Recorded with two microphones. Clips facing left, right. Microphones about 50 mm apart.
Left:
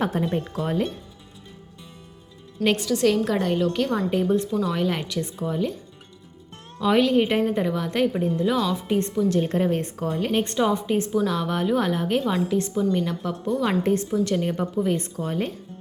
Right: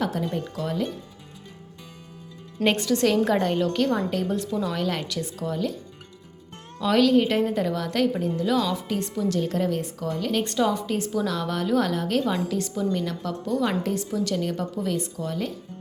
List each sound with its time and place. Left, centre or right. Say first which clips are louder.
0.0 s speech: left 2 dB; left
2.6 s a woman's voice: left 1 dB; centre
6.7 s a woman's voice: even; centre
9.3 s a woman's voice: left 1 dB; left
13.8 s a woman's voice: left 4 dB; left
14.9 s speech: left 2 dB; left